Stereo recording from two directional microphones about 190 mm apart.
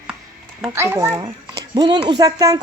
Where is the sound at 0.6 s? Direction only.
15° right (ahead or behind).